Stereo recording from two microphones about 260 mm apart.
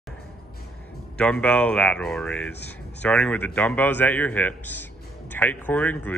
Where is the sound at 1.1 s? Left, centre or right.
Centre.